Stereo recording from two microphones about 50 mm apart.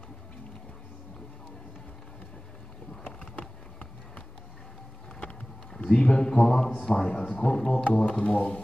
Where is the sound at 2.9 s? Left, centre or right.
Centre.